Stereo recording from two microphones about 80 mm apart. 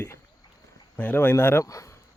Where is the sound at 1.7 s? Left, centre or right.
Left.